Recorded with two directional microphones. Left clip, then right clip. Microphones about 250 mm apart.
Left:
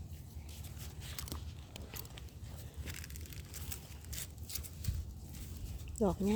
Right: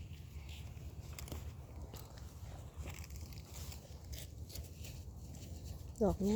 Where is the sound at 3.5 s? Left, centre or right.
Left.